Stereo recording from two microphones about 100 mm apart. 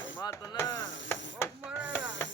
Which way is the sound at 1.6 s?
10° right (ahead or behind).